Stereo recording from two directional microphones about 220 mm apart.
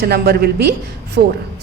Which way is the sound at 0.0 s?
45° right (ahead or behind).